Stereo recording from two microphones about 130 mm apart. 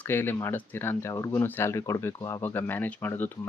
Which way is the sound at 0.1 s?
15° left (ahead or behind).